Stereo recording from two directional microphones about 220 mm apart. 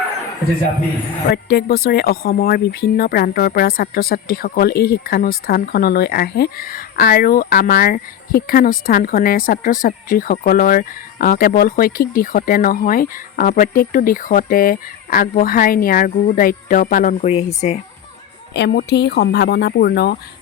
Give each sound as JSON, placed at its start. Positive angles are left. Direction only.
{"t": 1.3, "sound": "speech", "side_deg": 50}
{"t": 17.2, "sound": "speech", "side_deg": 25}
{"t": 18.5, "sound": "speech", "side_deg": 50}